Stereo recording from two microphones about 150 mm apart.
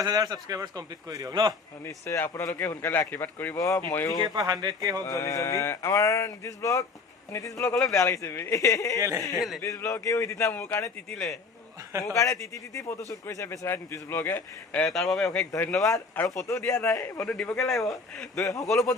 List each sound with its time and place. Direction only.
0.0 s a man's voice: 25° right (ahead or behind)
1.8 s a man's voice: 15° left (ahead or behind)
4.4 s a man's voice: 25° right (ahead or behind)
5.0 s speech: 20° left (ahead or behind)
7.9 s speech: 20° left (ahead or behind)
9.0 s a man's voice: 20° right (ahead or behind)
9.6 s speech: 20° left (ahead or behind)
11.1 s a man's voice: centre (ahead or behind)
12.1 s a man's voice: 20° left (ahead or behind)
14.8 s a man's voice: centre (ahead or behind)
15.8 s a man's voice: 20° left (ahead or behind)
17.3 s a man's voice: 5° left (ahead or behind)
18.3 s speech: 20° left (ahead or behind)
18.7 s a man's voice: centre (ahead or behind)